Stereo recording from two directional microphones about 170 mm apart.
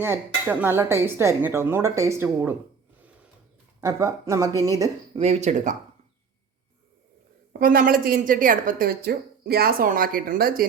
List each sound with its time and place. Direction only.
0.0 s speech: 10° right (ahead or behind)
3.8 s speech: 20° right (ahead or behind)
5.1 s speech: 35° right (ahead or behind)
7.6 s a woman's voice: 60° right (ahead or behind)